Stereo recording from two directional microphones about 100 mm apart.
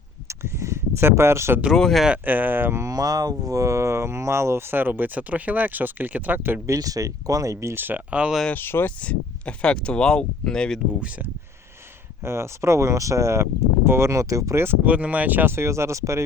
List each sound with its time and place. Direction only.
0.3 s a sound: 30° right (ahead or behind)
1.7 s speech: 5° left (ahead or behind)
2.0 s speech: 15° right (ahead or behind)
6.7 s speech: 35° right (ahead or behind); by 8.4 s 10° right (ahead or behind)
8.5 s speech: 20° left (ahead or behind)
12.2 s speech: 25° right (ahead or behind)